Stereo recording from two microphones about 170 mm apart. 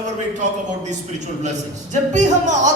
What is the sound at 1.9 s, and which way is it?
Speech, 45° right (ahead or behind).